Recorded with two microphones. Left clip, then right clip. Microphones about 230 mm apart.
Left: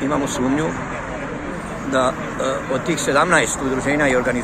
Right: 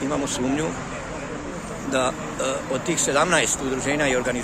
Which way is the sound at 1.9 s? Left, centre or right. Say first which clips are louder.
Left 5 dB; centre.